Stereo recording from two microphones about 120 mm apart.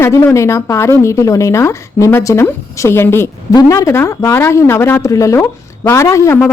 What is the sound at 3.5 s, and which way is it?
A woman's voice, 30° left (ahead or behind).